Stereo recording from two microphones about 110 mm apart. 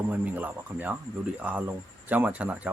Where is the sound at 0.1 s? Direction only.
15° right (ahead or behind).